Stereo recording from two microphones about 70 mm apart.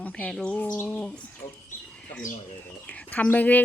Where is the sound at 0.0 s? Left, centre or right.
Centre.